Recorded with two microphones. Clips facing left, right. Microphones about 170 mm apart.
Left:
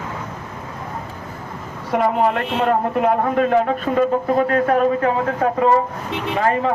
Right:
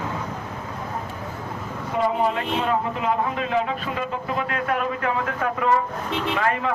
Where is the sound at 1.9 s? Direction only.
60° left (ahead or behind); by 6.7 s 35° left (ahead or behind).